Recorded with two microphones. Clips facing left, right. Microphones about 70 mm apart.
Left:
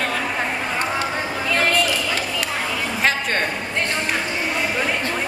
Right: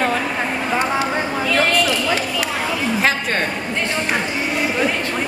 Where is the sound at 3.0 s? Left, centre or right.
Centre.